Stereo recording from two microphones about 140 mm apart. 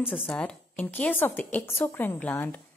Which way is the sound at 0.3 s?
10° left (ahead or behind).